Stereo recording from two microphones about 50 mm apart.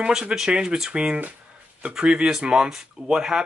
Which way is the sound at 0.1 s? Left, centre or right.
Centre.